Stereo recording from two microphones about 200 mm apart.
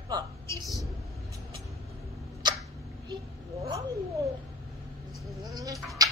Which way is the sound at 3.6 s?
15° right (ahead or behind).